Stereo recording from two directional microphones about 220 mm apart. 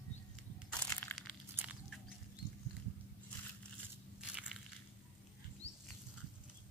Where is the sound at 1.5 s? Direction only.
5° right (ahead or behind).